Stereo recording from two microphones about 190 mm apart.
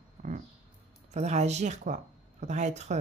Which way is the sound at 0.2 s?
35° right (ahead or behind).